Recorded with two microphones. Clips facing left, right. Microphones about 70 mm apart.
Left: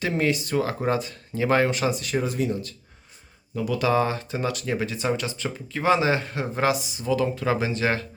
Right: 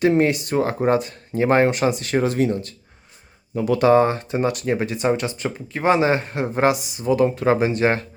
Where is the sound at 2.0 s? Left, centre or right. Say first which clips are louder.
Right 6 dB; right.